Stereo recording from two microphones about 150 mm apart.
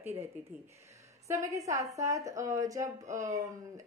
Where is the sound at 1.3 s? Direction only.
20° right (ahead or behind).